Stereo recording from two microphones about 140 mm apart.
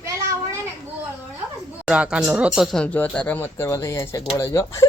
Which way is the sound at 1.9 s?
5° right (ahead or behind).